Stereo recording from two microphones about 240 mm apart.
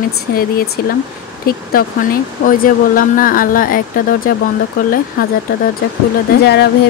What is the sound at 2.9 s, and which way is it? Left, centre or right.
Speech, left.